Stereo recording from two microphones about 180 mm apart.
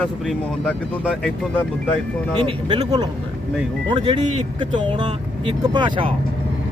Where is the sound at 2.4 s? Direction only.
25° right (ahead or behind).